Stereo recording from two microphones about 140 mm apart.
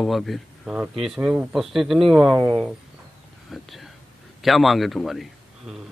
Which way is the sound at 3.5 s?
Centre (ahead or behind).